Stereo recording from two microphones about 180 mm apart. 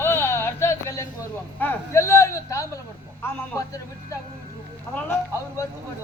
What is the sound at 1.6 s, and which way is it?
A man's voice, 15° left (ahead or behind).